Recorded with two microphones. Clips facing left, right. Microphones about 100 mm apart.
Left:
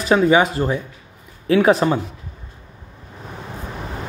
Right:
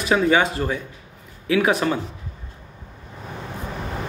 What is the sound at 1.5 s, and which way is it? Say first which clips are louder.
Speech: left 5 dB; 30° left (ahead or behind).